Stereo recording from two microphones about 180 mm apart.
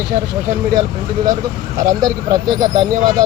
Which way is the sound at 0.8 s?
20° right (ahead or behind).